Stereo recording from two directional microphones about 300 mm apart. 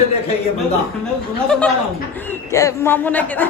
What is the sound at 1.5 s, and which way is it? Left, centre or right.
A woman's voice, centre.